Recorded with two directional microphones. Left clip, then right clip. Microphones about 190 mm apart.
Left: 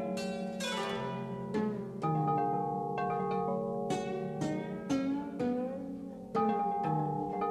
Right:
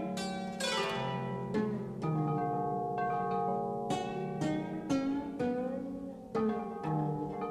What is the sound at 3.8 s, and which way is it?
Music, 15° left (ahead or behind).